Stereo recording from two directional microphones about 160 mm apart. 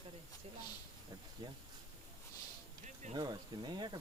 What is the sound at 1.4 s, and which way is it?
Speech, 25° right (ahead or behind).